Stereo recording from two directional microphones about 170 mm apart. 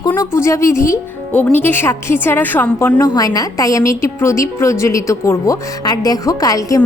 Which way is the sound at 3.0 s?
20° left (ahead or behind).